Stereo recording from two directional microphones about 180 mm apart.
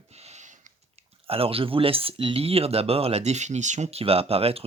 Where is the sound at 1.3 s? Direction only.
30° right (ahead or behind).